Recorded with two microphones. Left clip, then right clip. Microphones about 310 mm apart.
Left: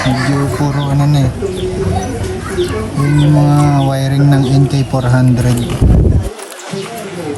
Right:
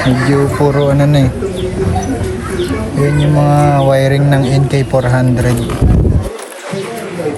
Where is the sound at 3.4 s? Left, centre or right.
Left.